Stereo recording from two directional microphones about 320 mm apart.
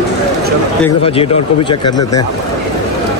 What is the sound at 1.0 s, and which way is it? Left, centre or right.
Speech, centre.